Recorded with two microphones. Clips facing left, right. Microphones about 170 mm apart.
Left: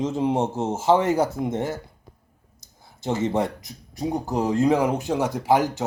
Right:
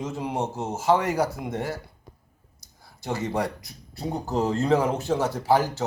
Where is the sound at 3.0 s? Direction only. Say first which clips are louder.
Left 4 dB; 25° left (ahead or behind).